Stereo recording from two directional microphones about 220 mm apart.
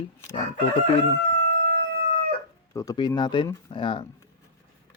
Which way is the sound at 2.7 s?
15° left (ahead or behind).